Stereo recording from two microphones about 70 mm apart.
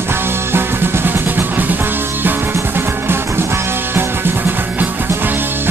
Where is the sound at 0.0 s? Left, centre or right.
Right.